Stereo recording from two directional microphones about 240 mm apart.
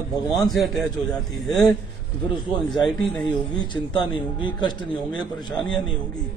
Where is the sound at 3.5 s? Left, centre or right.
Centre.